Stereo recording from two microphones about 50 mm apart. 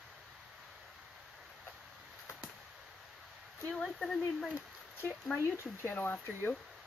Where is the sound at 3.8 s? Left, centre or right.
Centre.